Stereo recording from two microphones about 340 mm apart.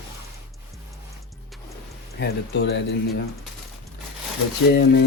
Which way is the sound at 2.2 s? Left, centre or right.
Left.